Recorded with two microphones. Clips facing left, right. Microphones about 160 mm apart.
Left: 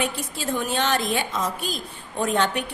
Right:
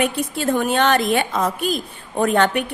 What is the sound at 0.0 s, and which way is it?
A woman's voice, 55° right (ahead or behind).